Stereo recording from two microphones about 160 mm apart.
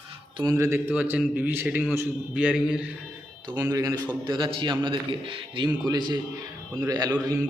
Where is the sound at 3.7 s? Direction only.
20° right (ahead or behind).